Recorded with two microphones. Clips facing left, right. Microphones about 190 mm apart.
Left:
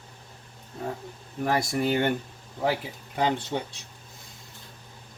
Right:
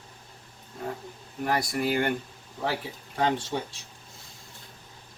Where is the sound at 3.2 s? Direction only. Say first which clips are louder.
Even; 15° left (ahead or behind).